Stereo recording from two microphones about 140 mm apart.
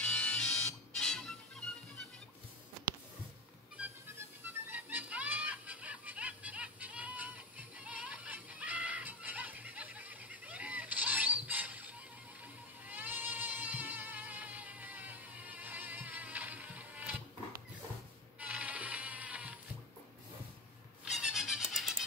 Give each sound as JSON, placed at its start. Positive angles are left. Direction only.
{"t": 0.0, "sound": "music", "side_deg": 5}
{"t": 4.6, "sound": "music", "side_deg": -15}
{"t": 18.4, "sound": "music", "side_deg": -10}
{"t": 21.0, "sound": "music", "side_deg": -5}